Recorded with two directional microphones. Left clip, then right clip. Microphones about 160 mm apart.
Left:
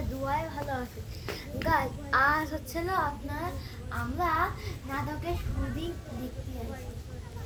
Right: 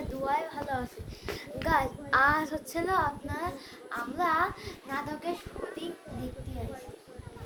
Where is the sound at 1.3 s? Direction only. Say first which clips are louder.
Even; 15° right (ahead or behind).